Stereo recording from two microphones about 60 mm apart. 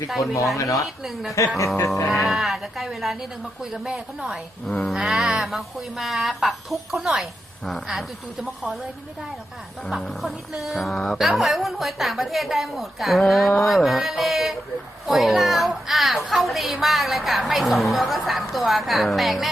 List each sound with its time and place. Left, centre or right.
0.5 s speech: left
1.0 s a woman's voice: centre
1.5 s music: left
2.0 s a woman's voice: centre
4.6 s speech: centre
4.9 s a woman's voice: centre
10.0 s a woman's voice: centre